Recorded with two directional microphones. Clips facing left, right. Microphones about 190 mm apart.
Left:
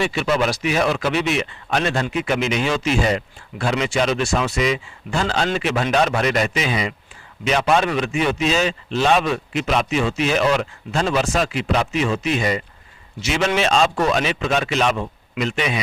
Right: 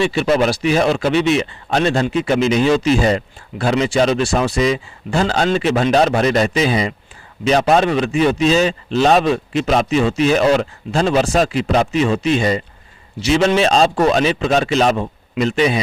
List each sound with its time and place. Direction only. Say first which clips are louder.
0.1 s speech: right 5 dB; 35° right (ahead or behind)